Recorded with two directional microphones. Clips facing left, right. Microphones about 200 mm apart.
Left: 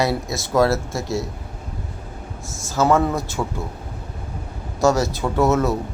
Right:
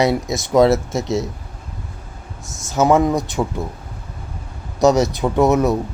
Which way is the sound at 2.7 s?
20° right (ahead or behind).